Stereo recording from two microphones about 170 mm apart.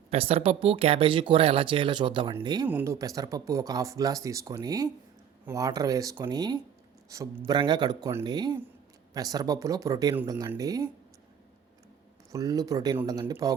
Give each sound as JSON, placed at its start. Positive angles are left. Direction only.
{"t": 0.1, "sound": "speech", "side_deg": -35}
{"t": 2.6, "sound": "speech", "side_deg": -15}
{"t": 12.3, "sound": "speech", "side_deg": -20}